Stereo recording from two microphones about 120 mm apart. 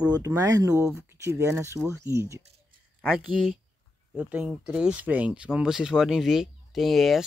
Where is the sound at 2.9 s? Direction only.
Centre (ahead or behind).